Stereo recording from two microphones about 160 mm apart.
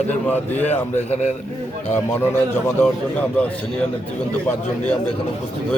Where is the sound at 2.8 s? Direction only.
10° left (ahead or behind).